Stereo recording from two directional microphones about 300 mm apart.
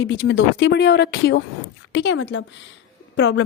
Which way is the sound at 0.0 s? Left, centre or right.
Left.